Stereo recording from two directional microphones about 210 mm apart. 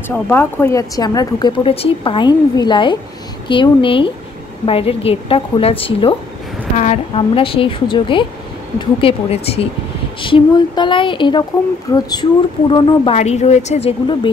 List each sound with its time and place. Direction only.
0.1 s a woman's voice: 10° left (ahead or behind); by 14.3 s 25° left (ahead or behind)